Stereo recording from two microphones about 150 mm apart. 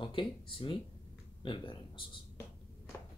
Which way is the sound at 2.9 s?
15° left (ahead or behind).